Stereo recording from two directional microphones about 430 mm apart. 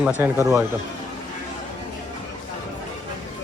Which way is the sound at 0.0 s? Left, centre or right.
Centre.